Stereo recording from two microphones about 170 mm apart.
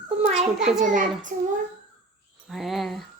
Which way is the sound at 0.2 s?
40° right (ahead or behind).